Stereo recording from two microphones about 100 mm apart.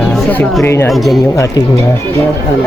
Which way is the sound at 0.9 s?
Centre (ahead or behind).